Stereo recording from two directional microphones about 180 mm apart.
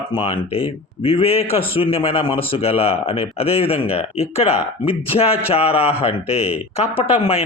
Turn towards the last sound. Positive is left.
turn(degrees=35)  # may be behind; listen again after turning